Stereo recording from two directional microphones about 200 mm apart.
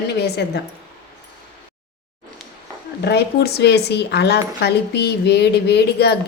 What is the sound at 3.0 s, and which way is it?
A woman's voice, 55° left (ahead or behind).